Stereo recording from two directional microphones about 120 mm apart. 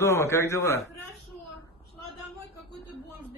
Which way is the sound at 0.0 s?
25° left (ahead or behind).